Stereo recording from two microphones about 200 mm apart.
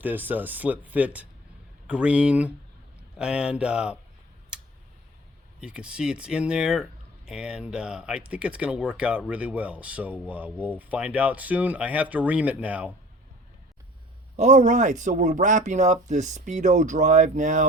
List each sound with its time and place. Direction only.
0.0 s speech: 10° right (ahead or behind)
4.5 s tick: 5° right (ahead or behind)
5.5 s speech: 5° right (ahead or behind)
14.3 s speech: 35° right (ahead or behind)